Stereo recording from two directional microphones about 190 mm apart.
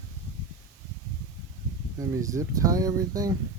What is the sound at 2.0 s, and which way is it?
Speech, 15° right (ahead or behind).